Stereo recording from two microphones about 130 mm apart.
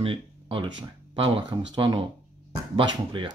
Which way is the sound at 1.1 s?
45° right (ahead or behind).